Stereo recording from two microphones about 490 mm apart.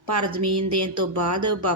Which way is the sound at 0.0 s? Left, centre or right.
Right.